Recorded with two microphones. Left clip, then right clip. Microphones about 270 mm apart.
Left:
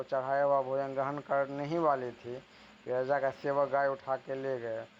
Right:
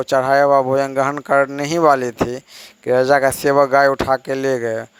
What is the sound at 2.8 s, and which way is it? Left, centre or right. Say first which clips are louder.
A man's voice: right 17 dB; right.